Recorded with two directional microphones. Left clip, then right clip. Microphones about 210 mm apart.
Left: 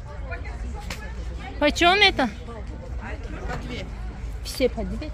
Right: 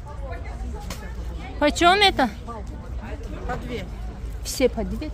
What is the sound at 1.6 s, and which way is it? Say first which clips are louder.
Speech: right 1 dB; centre (ahead or behind).